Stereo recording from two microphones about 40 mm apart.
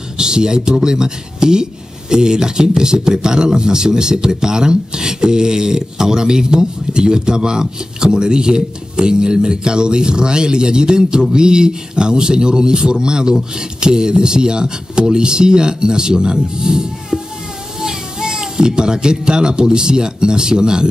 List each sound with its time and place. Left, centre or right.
0.2 s speech: centre